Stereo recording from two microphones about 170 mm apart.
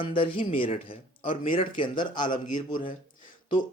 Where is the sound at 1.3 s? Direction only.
50° left (ahead or behind).